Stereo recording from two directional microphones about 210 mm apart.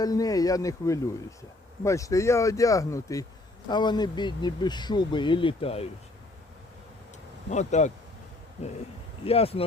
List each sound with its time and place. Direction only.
0.0 s speech: 15° left (ahead or behind)
7.5 s speech: 35° left (ahead or behind)
9.2 s speech: 30° left (ahead or behind)